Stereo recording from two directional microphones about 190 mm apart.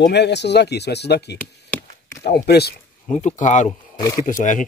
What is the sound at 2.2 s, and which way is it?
Speech, 55° left (ahead or behind).